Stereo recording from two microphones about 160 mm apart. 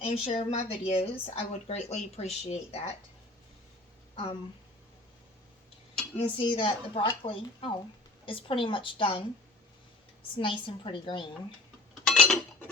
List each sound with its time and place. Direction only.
0.0 s speech: 35° left (ahead or behind)
4.1 s speech: 35° left (ahead or behind)
6.1 s speech: 35° left (ahead or behind)
10.3 s speech: 30° left (ahead or behind)
12.1 s cutlery: 5° left (ahead or behind)